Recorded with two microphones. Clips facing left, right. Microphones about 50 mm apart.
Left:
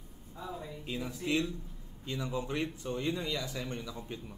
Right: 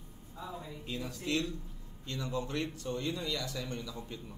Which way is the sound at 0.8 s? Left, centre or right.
Centre.